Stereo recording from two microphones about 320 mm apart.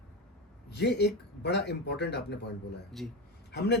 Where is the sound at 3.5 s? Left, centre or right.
Left.